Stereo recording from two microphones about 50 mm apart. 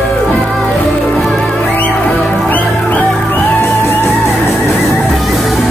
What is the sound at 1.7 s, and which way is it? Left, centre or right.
Music, left.